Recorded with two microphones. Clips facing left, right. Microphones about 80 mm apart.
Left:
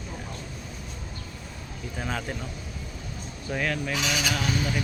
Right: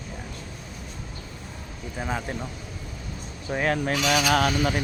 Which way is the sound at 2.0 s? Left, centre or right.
Centre.